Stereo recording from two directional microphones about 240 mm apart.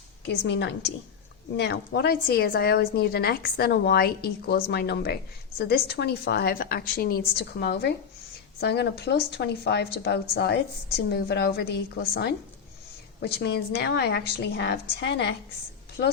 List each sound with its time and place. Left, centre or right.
0.3 s a woman's voice: left